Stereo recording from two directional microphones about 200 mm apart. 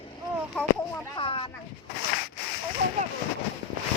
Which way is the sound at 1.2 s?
25° left (ahead or behind).